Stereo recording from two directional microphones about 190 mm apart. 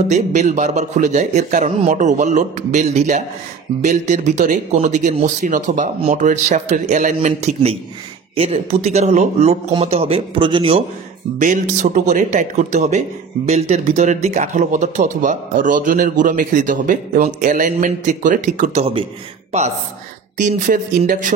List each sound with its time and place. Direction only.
0.1 s speech: 40° right (ahead or behind)
11.3 s speech: 40° right (ahead or behind)
20.3 s speech: 40° right (ahead or behind)